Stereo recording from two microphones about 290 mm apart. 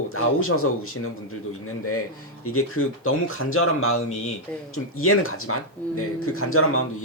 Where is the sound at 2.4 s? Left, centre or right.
Left.